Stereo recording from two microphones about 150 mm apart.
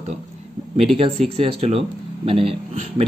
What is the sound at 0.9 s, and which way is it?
A man's voice, 40° right (ahead or behind).